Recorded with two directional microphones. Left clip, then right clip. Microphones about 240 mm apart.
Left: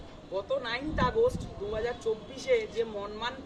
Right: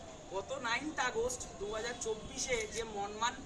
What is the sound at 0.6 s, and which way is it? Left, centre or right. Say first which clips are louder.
Speech: left 5 dB; centre.